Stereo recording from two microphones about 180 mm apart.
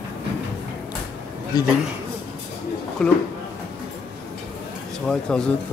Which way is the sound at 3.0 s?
5° left (ahead or behind).